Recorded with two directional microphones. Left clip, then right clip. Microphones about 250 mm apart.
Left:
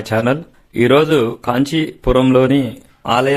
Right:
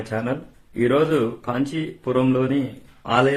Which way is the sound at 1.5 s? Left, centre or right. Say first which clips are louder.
Left 8 dB; left.